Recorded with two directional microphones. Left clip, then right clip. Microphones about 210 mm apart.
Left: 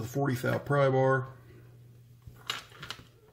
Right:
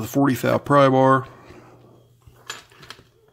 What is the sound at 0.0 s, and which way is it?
Speech, 45° right (ahead or behind).